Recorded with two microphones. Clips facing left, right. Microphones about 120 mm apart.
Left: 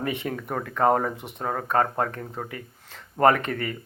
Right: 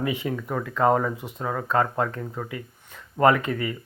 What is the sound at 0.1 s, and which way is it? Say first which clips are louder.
Speech: right 2 dB; 55° left (ahead or behind).